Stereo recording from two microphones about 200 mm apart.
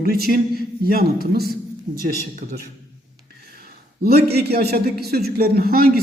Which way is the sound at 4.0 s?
50° right (ahead or behind).